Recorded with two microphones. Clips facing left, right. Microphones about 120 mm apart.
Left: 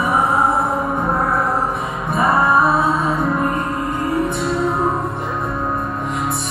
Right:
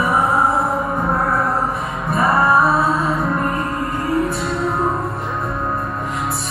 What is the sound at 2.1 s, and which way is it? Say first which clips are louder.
Music: even; centre (ahead or behind).